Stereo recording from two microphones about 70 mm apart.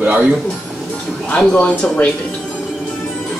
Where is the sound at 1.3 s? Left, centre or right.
Centre.